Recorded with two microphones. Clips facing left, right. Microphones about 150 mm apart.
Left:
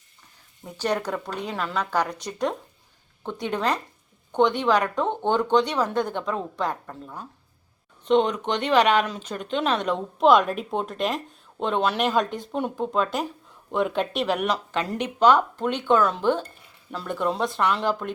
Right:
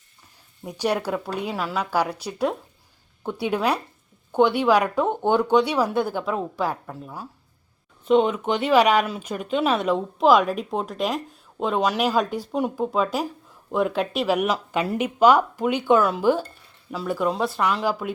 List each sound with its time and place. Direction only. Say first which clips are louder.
0.6 s speech: right 2 dB; 10° right (ahead or behind)